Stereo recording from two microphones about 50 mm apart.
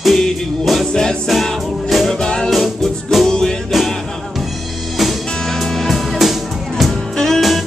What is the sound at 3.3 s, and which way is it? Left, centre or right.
Music, centre.